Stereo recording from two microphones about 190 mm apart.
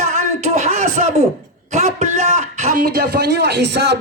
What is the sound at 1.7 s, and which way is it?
A man's voice, 40° right (ahead or behind).